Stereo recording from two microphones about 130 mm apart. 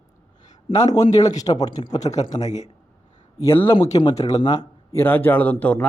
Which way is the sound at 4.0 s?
35° left (ahead or behind).